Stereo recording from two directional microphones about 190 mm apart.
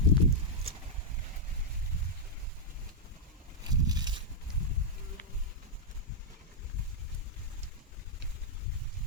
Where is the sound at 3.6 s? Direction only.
20° right (ahead or behind).